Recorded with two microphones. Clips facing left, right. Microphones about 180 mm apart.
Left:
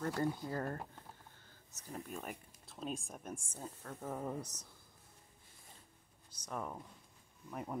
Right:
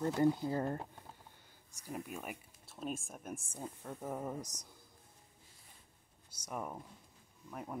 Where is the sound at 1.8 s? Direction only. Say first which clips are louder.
Right 2 dB; 10° right (ahead or behind).